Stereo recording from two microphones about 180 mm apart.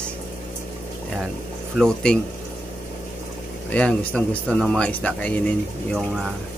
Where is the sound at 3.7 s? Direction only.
5° left (ahead or behind).